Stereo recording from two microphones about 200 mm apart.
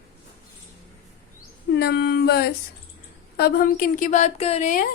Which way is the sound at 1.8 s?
55° left (ahead or behind).